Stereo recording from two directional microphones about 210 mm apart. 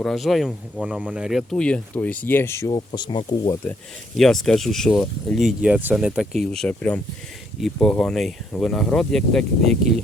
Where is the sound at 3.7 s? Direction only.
Centre (ahead or behind).